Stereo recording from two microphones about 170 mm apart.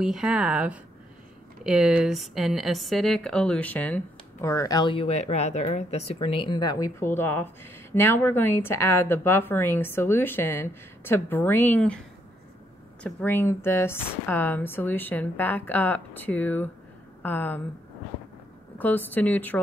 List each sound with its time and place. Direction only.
0.0 s speech: 5° right (ahead or behind)
13.0 s speech: 10° left (ahead or behind)
18.8 s speech: 10° left (ahead or behind)